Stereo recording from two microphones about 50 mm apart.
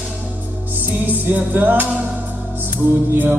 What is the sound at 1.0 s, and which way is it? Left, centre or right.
Music, right.